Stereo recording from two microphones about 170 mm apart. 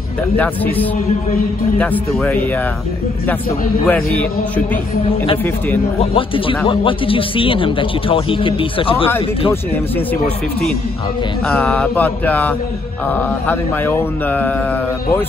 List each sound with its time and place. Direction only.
1.8 s mantra: 10° left (ahead or behind)
3.8 s mantra: 5° left (ahead or behind)
5.9 s a man's voice: 30° left (ahead or behind)
11.4 s mantra: 5° left (ahead or behind)